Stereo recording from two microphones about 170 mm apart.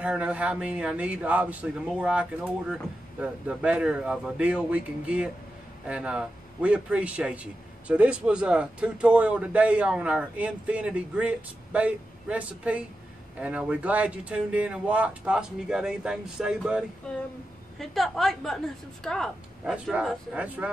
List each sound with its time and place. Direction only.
0.0 s a man's voice: 5° right (ahead or behind)
17.1 s speech: 5° left (ahead or behind)